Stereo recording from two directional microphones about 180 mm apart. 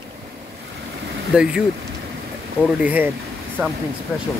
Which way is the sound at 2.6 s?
10° left (ahead or behind).